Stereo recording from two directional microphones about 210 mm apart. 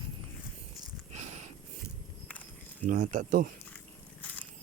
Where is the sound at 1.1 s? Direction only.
35° right (ahead or behind).